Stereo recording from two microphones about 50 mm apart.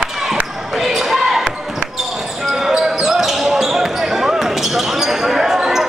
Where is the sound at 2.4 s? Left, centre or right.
Centre.